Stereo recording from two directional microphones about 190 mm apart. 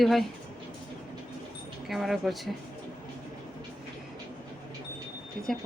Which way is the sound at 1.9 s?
Centre (ahead or behind).